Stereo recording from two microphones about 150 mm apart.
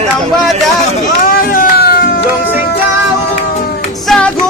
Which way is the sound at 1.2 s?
70° left (ahead or behind).